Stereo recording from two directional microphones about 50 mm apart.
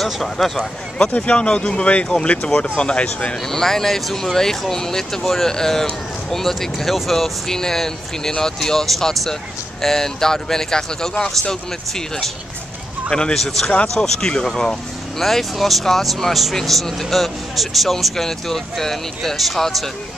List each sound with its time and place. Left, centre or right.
0.0 s speech: centre
0.9 s speech: left
3.5 s speech: centre
13.1 s speech: centre
13.4 s speech: centre